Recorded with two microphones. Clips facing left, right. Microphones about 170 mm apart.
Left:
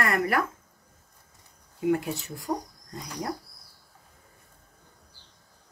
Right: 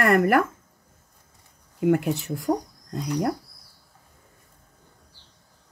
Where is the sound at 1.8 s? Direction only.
60° right (ahead or behind).